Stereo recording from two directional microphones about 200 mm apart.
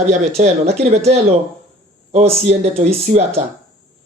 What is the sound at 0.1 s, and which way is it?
Speech, 35° right (ahead or behind).